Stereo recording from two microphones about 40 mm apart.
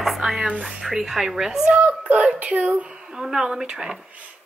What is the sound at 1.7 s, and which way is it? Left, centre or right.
A child's voice, right.